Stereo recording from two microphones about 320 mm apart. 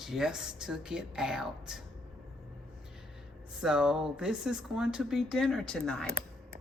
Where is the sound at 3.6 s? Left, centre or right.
Centre.